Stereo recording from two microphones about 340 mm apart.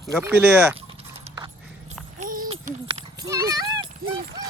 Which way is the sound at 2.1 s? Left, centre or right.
Right.